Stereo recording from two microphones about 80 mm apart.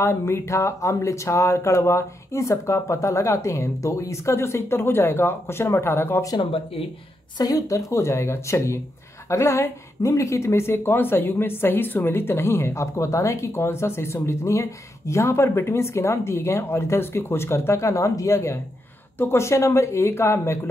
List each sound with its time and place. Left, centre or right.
0.0 s speech: left
7.3 s speech: left